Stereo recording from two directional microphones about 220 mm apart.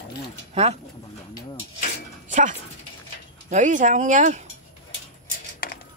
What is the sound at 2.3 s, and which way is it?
Speech, 35° right (ahead or behind).